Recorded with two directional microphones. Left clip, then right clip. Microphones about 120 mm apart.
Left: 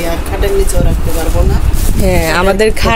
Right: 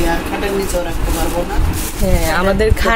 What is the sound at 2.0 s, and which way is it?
Speech, 50° left (ahead or behind).